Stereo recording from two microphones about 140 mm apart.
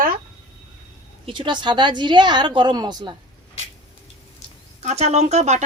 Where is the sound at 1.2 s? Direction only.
35° right (ahead or behind).